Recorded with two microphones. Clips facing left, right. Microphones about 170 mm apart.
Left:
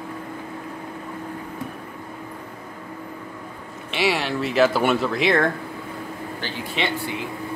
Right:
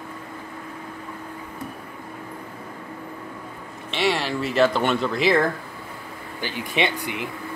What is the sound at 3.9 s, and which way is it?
Speech, centre (ahead or behind).